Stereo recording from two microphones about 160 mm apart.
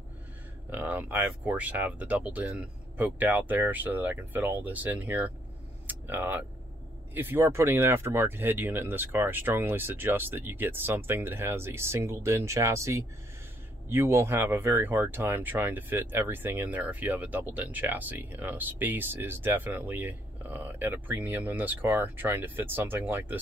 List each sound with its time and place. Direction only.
0.7 s speech: 10° right (ahead or behind)
5.9 s a sound: 10° right (ahead or behind)
7.2 s speech: 15° right (ahead or behind)